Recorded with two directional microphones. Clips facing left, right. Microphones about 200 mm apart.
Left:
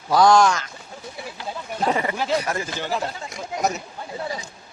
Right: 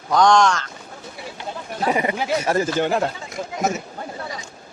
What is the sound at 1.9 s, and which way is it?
Speech, 15° right (ahead or behind).